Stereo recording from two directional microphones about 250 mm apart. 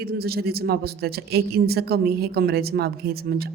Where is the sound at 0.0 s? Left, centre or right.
Right.